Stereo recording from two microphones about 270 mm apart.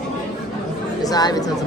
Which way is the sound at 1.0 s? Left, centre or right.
Centre.